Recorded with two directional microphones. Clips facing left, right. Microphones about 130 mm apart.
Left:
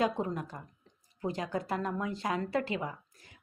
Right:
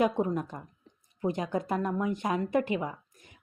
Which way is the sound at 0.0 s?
20° right (ahead or behind).